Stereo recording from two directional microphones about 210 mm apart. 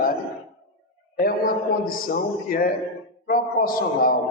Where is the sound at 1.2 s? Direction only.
45° left (ahead or behind).